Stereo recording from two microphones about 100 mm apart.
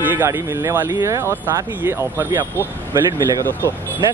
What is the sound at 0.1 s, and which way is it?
Speech, 25° right (ahead or behind).